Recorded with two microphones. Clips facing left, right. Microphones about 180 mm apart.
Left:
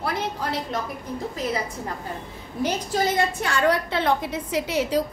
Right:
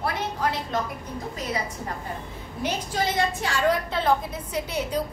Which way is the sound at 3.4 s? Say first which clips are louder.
Left 2 dB; 70° left (ahead or behind).